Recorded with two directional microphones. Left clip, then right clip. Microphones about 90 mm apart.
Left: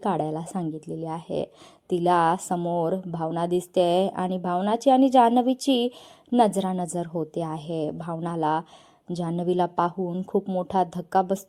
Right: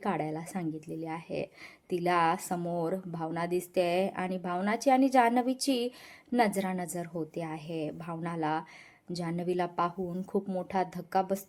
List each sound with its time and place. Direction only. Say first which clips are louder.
0.0 s a woman's voice: left 7 dB; 45° left (ahead or behind)
2.6 s a woman's voice: left 7 dB; 30° left (ahead or behind); by 9.9 s 45° left (ahead or behind)
10.0 s speech: left 7 dB; 30° left (ahead or behind)
10.7 s a woman's voice: left 8 dB; 50° left (ahead or behind)